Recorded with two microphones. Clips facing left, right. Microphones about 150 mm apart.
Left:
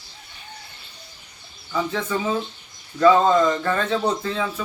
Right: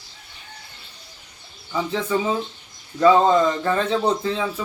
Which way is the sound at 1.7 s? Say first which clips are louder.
Right 2 dB; 15° right (ahead or behind).